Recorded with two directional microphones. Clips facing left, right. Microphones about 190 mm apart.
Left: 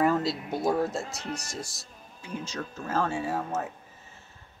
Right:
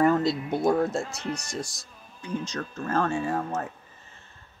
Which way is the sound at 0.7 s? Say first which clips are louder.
Right 3 dB; centre (ahead or behind).